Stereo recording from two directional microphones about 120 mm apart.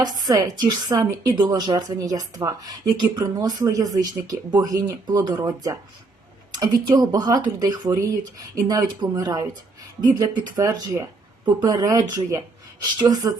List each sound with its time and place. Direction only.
0.0 s a woman's voice: 35° right (ahead or behind)